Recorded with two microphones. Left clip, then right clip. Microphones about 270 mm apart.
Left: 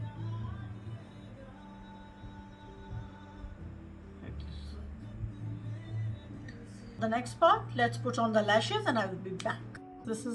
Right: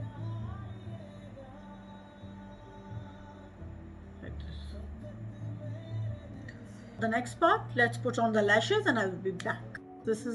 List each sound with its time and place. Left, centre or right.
7.0 s a woman's voice: centre
7.9 s speech: left
8.2 s speech: centre